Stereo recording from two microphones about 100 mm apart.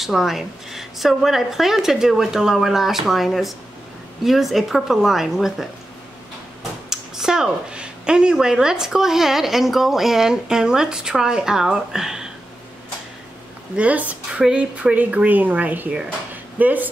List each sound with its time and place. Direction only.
0.0 s speech: centre (ahead or behind)
6.9 s speech: 5° right (ahead or behind)
13.7 s speech: 15° right (ahead or behind)